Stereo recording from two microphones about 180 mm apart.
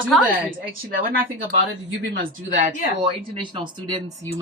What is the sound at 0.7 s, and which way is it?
Speech, 55° right (ahead or behind).